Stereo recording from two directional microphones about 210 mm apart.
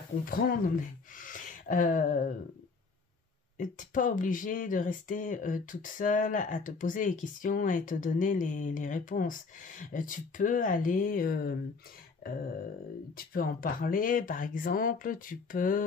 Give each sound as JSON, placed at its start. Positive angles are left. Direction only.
{"t": 0.2, "sound": "speech", "side_deg": 45}
{"t": 1.1, "sound": "a sound", "side_deg": 40}
{"t": 3.5, "sound": "speech", "side_deg": 40}
{"t": 13.1, "sound": "speech", "side_deg": 45}